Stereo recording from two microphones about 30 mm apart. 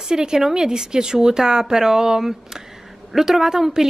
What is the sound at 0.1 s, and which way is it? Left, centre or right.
A woman's voice, right.